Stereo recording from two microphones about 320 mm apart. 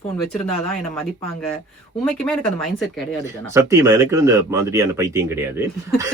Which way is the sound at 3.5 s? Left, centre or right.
Centre.